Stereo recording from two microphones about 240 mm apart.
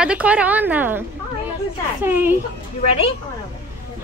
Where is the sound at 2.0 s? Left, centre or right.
Centre.